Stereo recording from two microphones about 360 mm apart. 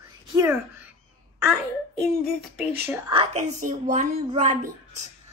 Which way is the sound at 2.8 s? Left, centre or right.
Centre.